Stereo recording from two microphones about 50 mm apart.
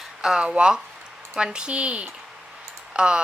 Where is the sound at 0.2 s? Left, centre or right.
Centre.